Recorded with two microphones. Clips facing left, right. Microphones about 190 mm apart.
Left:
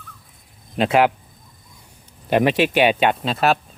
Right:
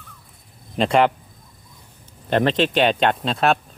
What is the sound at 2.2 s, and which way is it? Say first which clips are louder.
Speech: left 2 dB; 10° left (ahead or behind).